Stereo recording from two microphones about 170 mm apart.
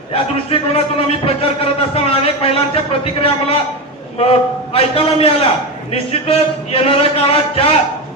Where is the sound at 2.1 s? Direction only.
35° left (ahead or behind).